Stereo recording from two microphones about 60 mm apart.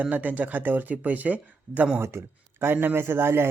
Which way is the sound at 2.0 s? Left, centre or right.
Right.